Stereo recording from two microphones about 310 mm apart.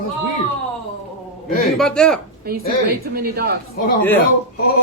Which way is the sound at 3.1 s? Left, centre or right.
Right.